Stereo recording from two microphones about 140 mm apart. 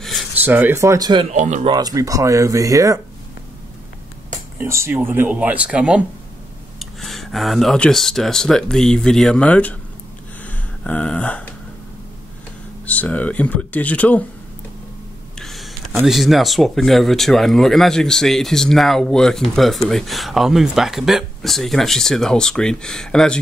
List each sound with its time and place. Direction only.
0.0 s a sound: centre (ahead or behind)
0.3 s speech: 10° right (ahead or behind); by 1.2 s 30° right (ahead or behind)
1.3 s speech: 60° right (ahead or behind)
1.7 s speech: 25° right (ahead or behind)
4.6 s speech: 20° right (ahead or behind); by 9.8 s 10° left (ahead or behind)
10.4 s a sound: 10° left (ahead or behind)
12.8 s speech: 10° left (ahead or behind)
15.3 s a sound: centre (ahead or behind)
16.1 s speech: centre (ahead or behind)